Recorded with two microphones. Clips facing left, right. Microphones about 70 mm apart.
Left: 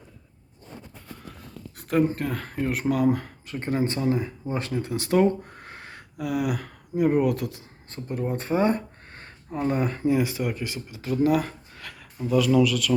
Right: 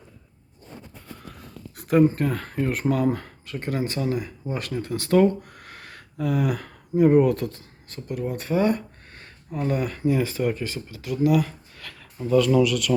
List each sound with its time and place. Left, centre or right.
1.2 s speech: centre
3.4 s speech: left
6.1 s speech: centre
7.6 s speech: left
10.2 s speech: centre
10.9 s speech: left
11.8 s a sound: centre
12.5 s speech: centre